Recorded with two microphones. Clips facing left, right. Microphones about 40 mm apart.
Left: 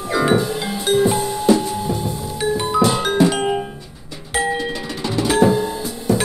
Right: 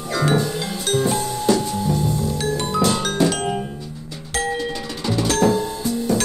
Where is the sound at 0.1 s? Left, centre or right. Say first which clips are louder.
Left 3 dB; centre.